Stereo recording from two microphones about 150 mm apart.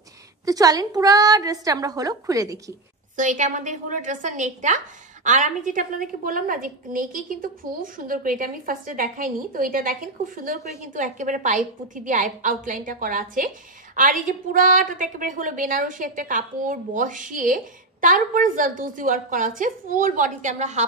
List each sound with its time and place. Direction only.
0.5 s a woman's voice: 25° right (ahead or behind)
3.2 s a woman's voice: 55° right (ahead or behind)